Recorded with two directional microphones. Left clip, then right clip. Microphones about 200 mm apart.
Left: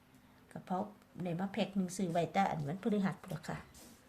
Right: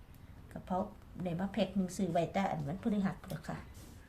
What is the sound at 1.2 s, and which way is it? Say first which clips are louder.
A woman's voice: right 2 dB; 20° left (ahead or behind).